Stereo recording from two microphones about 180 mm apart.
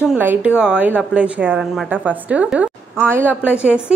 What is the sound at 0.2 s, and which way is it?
A woman's voice, 10° right (ahead or behind).